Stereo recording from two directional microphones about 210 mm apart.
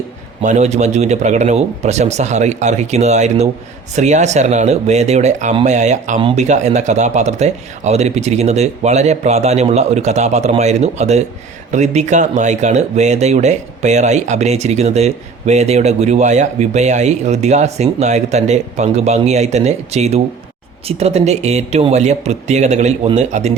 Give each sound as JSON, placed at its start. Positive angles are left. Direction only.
{"t": 0.4, "sound": "speech", "side_deg": -35}